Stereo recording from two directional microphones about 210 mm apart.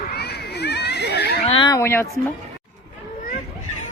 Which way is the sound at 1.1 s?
50° left (ahead or behind).